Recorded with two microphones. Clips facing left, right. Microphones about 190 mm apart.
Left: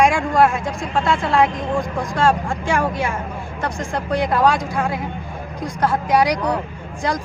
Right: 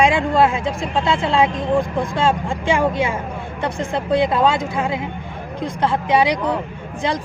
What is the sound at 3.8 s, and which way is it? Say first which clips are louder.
Speech: right 4 dB; 25° right (ahead or behind).